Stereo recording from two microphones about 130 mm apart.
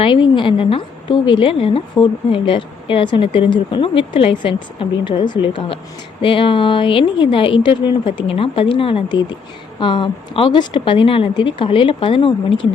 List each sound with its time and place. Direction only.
0.0 s a woman's voice: 40° left (ahead or behind)